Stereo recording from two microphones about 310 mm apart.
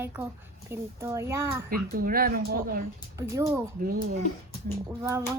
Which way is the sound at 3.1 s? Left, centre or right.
Centre.